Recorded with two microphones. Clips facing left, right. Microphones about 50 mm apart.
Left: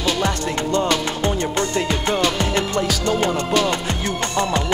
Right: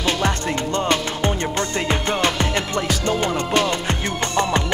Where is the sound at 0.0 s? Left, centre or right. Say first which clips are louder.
Even; right.